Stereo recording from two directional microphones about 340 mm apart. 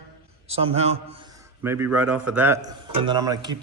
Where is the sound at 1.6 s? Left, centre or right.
Centre.